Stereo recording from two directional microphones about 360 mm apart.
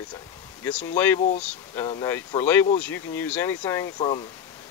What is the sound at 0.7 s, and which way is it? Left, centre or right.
Speech, centre.